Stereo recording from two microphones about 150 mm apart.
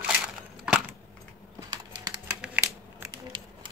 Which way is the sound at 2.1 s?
5° right (ahead or behind).